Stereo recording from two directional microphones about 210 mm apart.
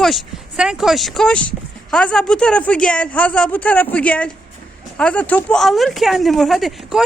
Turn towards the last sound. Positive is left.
turn(degrees=0)  # may be behind; listen again after turning